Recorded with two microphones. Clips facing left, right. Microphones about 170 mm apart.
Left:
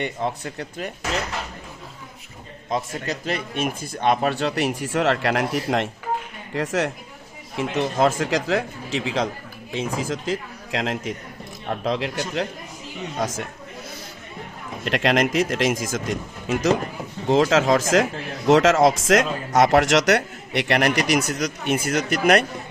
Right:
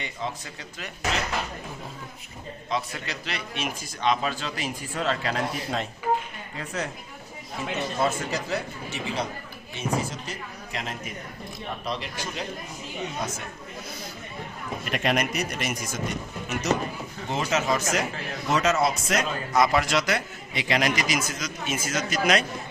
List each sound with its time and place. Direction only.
0.0 s speech: 60° left (ahead or behind)
2.6 s speech: 45° left (ahead or behind); by 6.9 s 80° left
7.6 s speech: 90° left
14.8 s speech: 90° left; by 22.4 s 60° left (ahead or behind)